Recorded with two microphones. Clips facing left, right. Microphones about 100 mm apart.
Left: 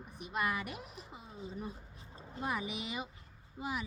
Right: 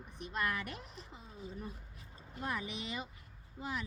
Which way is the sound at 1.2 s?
25° left (ahead or behind).